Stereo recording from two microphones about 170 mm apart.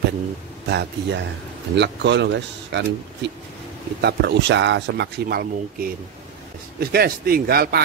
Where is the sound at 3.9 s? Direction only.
75° right (ahead or behind).